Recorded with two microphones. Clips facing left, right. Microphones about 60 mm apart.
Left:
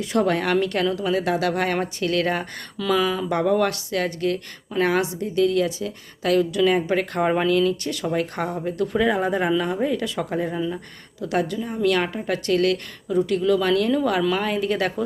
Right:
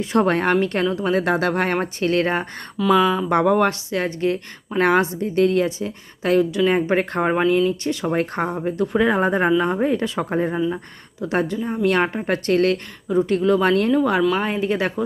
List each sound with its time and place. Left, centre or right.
0.0 s a woman's voice: right
2.7 s speech: centre
3.2 s speech: right
3.6 s speech: right
4.8 s a woman's voice: right
7.2 s a woman's voice: centre; by 13.9 s right
13.9 s speech: right
14.2 s speech: centre
14.4 s speech: right